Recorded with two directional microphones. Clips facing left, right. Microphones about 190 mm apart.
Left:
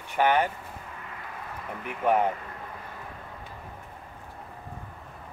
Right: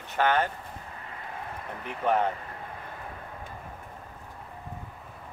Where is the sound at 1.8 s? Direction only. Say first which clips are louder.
Left 2 dB; 10° left (ahead or behind).